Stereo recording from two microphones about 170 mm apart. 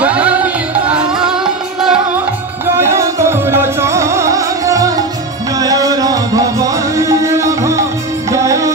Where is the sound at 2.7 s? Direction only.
15° right (ahead or behind).